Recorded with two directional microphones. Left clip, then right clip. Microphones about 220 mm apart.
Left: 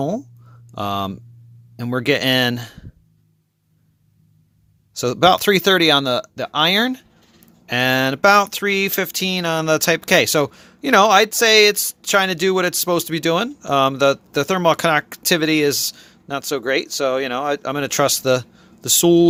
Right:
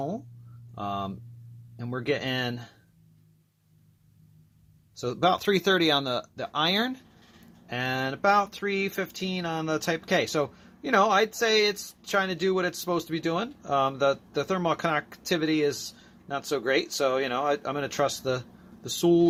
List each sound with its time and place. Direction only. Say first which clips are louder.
0.8 s speech: left 9 dB; 45° left (ahead or behind)
4.9 s speech: left 10 dB; 45° left (ahead or behind)